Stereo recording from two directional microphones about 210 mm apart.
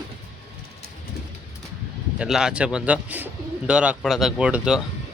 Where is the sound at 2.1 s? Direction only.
5° right (ahead or behind).